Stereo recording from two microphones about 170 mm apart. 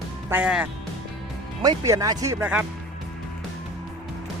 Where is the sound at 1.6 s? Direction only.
20° right (ahead or behind).